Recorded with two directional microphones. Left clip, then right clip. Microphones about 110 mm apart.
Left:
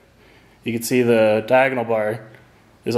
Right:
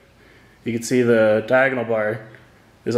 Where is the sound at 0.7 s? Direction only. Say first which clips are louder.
Even; 15° left (ahead or behind).